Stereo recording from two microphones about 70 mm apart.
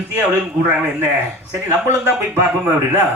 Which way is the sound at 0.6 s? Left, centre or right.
Right.